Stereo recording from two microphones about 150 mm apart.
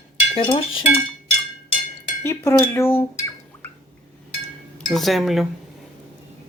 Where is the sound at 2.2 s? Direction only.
15° left (ahead or behind).